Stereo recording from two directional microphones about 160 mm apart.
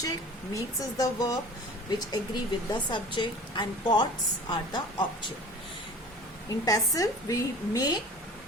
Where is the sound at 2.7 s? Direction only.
30° left (ahead or behind).